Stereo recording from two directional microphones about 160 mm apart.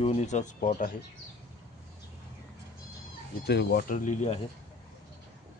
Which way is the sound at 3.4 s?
85° left.